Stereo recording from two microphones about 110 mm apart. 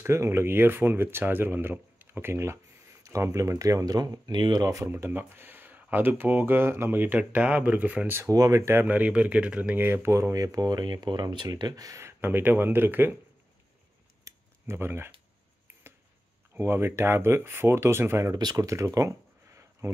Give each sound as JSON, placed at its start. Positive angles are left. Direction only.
{"t": 0.0, "sound": "speech", "side_deg": -25}
{"t": 4.8, "sound": "speech", "side_deg": -20}
{"t": 8.2, "sound": "speech", "side_deg": -30}
{"t": 14.2, "sound": "a sound", "side_deg": -25}
{"t": 16.5, "sound": "speech", "side_deg": -20}